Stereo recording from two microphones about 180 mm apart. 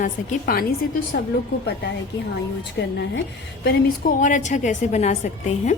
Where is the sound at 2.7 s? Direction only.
70° left (ahead or behind).